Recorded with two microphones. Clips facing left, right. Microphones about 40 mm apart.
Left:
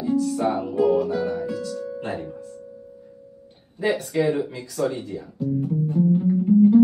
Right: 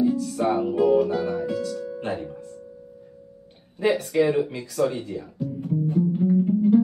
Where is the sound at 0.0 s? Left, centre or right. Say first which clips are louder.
Even; centre.